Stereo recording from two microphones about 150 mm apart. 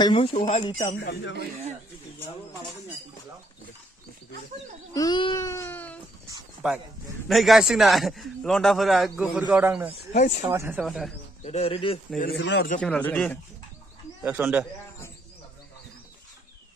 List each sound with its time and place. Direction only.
0.0 s speech: 35° left (ahead or behind)
4.9 s speech: 30° left (ahead or behind); by 6.0 s 10° left (ahead or behind)
6.6 s a man's voice: 5° right (ahead or behind)
9.5 s speech: 10° right (ahead or behind)
10.1 s speech: 50° left (ahead or behind)
10.5 s speech: 15° right (ahead or behind)
10.8 s a man's voice: centre (ahead or behind)
11.4 s speech: 40° left (ahead or behind)
12.2 s speech: 75° left (ahead or behind)
12.8 s speech: 10° left (ahead or behind)
14.4 s speech: 15° right (ahead or behind)